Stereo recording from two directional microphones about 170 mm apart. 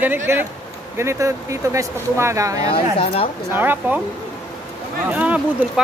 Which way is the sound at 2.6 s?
35° left (ahead or behind).